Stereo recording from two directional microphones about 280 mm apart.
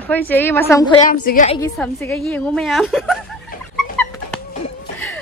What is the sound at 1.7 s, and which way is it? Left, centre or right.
A woman's voice, centre.